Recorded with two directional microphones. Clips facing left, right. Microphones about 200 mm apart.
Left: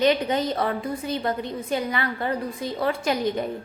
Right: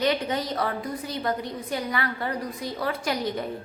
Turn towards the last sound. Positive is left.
turn(degrees=25)  # may be behind; listen again after turning